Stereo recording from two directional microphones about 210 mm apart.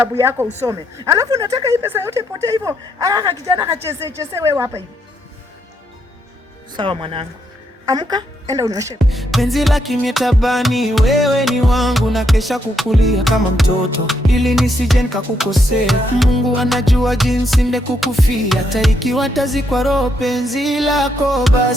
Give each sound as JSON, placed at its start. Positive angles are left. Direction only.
{"t": 0.0, "sound": "speech", "side_deg": -10}
{"t": 6.7, "sound": "speech", "side_deg": -25}
{"t": 9.0, "sound": "music", "side_deg": 0}